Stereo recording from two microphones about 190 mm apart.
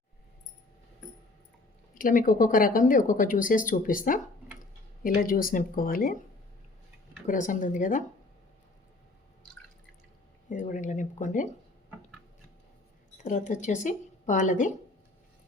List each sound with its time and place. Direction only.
2.0 s speech: 45° left (ahead or behind)
7.3 s speech: 45° left (ahead or behind)
10.5 s speech: 40° left (ahead or behind)
13.1 s speech: 40° left (ahead or behind)